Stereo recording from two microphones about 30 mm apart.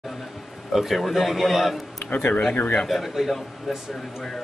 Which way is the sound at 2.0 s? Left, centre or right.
Left.